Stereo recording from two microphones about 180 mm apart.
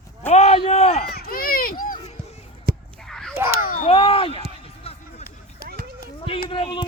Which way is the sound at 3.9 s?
30° left (ahead or behind).